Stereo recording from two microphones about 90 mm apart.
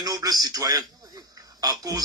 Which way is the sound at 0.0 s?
45° right (ahead or behind).